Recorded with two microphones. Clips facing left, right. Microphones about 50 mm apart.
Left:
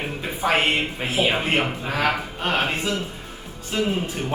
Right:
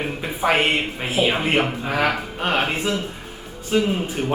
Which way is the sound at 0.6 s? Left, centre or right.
Centre.